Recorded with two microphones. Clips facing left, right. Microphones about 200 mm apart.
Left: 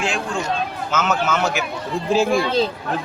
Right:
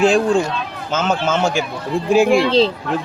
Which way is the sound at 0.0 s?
35° right (ahead or behind).